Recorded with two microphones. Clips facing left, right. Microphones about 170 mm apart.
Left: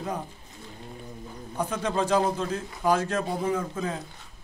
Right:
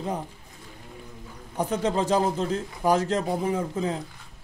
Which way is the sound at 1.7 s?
25° right (ahead or behind).